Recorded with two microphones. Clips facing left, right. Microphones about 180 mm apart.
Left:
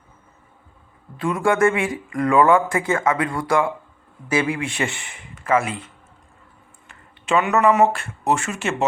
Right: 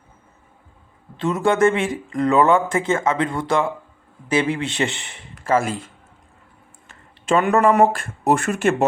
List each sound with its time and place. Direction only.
1.1 s speech: 25° right (ahead or behind)
5.6 s a man's voice: 40° right (ahead or behind)
6.8 s a sound: 45° right (ahead or behind)
7.6 s speech: 40° right (ahead or behind)